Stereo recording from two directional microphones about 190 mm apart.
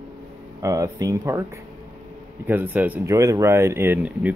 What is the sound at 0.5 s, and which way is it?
Speech, 15° right (ahead or behind).